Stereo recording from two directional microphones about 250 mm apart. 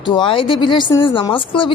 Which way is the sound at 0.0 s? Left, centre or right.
Centre.